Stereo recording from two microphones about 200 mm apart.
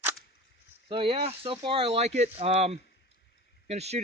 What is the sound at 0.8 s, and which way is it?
Speech, 25° right (ahead or behind).